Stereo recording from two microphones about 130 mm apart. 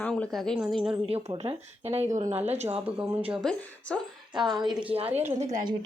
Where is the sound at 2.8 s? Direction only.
10° right (ahead or behind).